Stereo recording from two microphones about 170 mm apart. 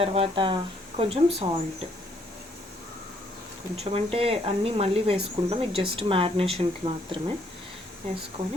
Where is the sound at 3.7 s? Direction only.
35° right (ahead or behind).